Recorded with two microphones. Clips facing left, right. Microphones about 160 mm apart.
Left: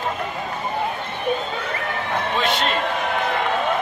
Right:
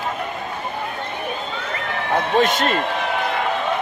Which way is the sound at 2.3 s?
45° right (ahead or behind).